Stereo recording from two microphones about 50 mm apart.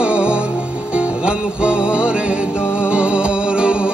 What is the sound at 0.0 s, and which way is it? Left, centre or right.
Music, right.